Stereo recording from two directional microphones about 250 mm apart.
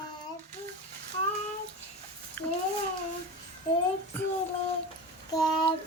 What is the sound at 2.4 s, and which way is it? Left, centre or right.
Babbling, centre.